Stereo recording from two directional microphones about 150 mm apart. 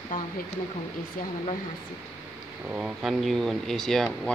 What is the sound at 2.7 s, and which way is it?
Speech, 5° right (ahead or behind).